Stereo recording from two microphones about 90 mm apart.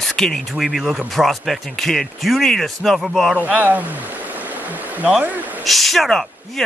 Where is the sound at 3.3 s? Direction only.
20° right (ahead or behind).